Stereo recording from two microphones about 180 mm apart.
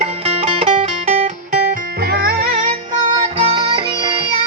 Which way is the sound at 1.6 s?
55° right (ahead or behind).